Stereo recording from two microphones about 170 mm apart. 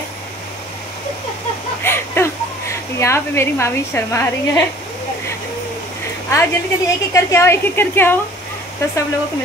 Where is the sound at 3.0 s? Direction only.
15° left (ahead or behind).